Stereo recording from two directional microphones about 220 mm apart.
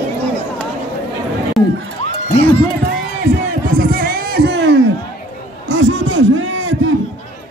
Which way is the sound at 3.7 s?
45° right (ahead or behind).